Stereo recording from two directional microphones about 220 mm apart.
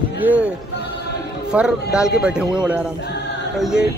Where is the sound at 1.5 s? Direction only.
5° right (ahead or behind).